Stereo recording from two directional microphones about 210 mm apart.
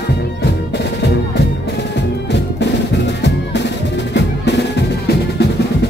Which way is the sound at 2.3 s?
55° left (ahead or behind).